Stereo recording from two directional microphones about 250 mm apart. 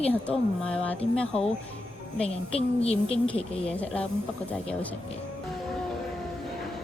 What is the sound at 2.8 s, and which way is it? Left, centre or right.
Speech, left.